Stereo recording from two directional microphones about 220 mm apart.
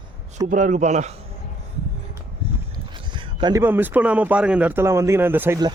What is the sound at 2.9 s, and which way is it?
Speech, 20° right (ahead or behind).